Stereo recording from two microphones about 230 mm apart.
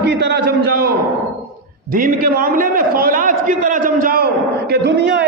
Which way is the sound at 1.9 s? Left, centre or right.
Right.